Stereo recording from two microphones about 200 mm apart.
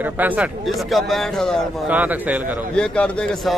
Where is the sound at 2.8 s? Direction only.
5° left (ahead or behind).